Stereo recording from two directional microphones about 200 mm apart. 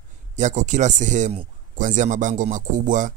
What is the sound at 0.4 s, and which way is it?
Speech, 40° right (ahead or behind).